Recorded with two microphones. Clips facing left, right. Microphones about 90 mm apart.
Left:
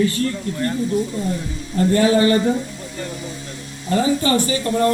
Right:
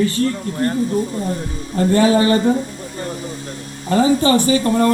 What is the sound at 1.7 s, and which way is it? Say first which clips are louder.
Speech: right 2 dB; 30° right (ahead or behind).